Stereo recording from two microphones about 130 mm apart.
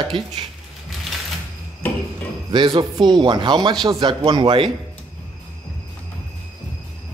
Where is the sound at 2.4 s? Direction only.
40° right (ahead or behind).